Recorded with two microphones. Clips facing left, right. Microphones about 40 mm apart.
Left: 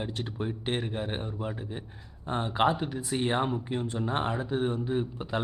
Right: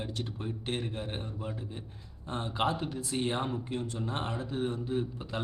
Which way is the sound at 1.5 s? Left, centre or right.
Left.